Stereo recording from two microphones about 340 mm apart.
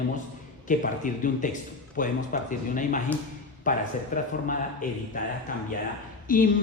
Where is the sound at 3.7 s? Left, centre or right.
Left.